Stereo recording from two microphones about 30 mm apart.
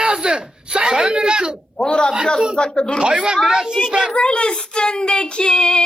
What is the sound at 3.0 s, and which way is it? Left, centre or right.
Speech, right.